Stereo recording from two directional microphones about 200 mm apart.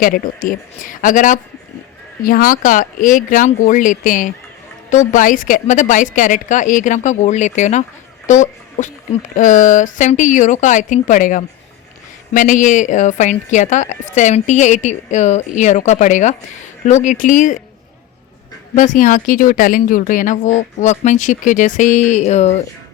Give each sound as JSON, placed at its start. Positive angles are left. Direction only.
{"t": 0.4, "sound": "speech", "side_deg": 40}
{"t": 18.7, "sound": "speech", "side_deg": 40}